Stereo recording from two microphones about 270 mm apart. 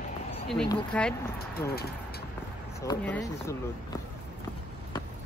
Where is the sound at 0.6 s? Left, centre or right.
Centre.